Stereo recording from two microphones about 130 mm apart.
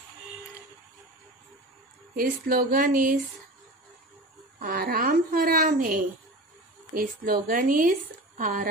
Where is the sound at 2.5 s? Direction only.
90° right.